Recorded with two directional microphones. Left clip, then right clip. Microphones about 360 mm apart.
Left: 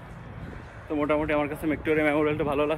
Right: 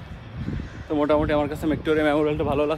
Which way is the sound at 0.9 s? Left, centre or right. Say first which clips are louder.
Right 4 dB; centre.